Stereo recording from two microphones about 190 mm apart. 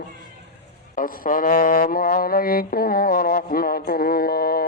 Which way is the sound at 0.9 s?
45° left (ahead or behind).